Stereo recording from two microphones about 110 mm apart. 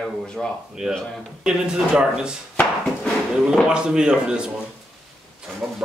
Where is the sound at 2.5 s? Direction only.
20° left (ahead or behind).